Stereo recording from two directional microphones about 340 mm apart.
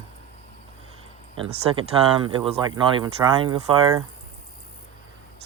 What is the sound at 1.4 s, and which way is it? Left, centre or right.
Speech, centre.